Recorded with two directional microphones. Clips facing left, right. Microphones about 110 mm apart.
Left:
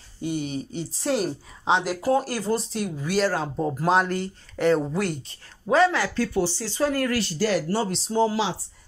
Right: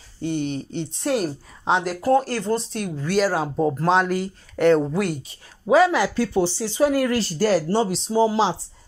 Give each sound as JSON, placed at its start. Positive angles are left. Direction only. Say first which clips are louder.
{"t": 0.2, "sound": "speech", "louder": "right 3 dB", "side_deg": 5}
{"t": 3.3, "sound": "speech", "louder": "right 4 dB", "side_deg": -10}
{"t": 3.8, "sound": "speech", "louder": "left 1 dB", "side_deg": 5}
{"t": 7.3, "sound": "speech", "louder": "right 5 dB", "side_deg": -40}
{"t": 8.1, "sound": "speech", "louder": "right 2 dB", "side_deg": -15}